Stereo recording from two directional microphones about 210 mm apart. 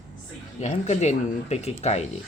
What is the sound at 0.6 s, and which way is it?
Speech, 35° left (ahead or behind).